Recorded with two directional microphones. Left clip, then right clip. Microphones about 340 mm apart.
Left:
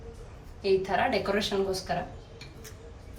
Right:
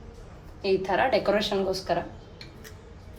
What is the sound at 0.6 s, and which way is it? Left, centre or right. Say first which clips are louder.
Speech: right 2 dB; right.